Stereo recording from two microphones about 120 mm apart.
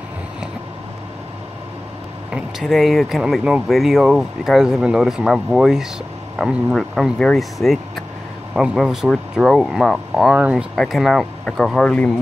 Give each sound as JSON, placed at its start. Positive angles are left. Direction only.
{"t": 2.3, "sound": "speech", "side_deg": 0}